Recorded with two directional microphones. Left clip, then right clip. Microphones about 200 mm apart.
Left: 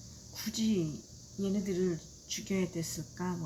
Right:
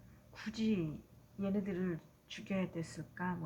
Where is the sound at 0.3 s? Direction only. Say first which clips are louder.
Left 5 dB; 5° right (ahead or behind).